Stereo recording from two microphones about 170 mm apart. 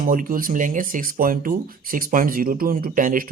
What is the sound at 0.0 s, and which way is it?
Speech, 55° right (ahead or behind).